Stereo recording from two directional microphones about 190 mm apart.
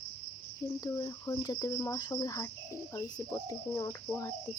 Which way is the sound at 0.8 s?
20° left (ahead or behind).